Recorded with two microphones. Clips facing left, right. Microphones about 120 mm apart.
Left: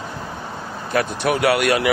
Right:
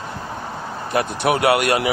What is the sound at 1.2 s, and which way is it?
Speech, 55° right (ahead or behind).